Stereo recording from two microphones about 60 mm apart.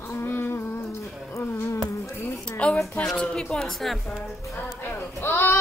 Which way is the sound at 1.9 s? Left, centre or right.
Left.